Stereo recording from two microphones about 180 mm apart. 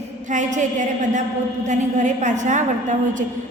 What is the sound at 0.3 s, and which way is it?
A woman's voice, 40° right (ahead or behind).